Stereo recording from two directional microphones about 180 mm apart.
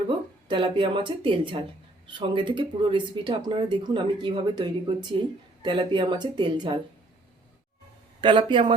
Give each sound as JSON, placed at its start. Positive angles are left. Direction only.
{"t": 0.4, "sound": "speech", "side_deg": -30}
{"t": 8.2, "sound": "speech", "side_deg": -25}